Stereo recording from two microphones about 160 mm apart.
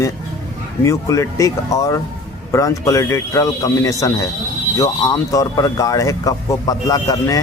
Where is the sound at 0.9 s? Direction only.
20° left (ahead or behind).